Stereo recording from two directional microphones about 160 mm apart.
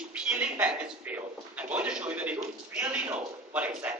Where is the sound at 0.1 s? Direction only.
10° right (ahead or behind).